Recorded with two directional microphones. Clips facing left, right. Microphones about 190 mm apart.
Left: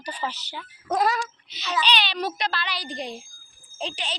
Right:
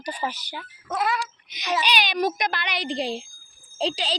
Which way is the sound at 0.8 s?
40° left (ahead or behind).